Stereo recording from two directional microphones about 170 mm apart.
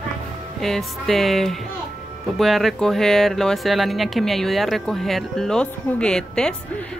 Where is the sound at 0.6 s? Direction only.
Centre (ahead or behind).